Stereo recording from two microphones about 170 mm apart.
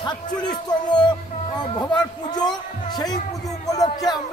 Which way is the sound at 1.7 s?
25° left (ahead or behind).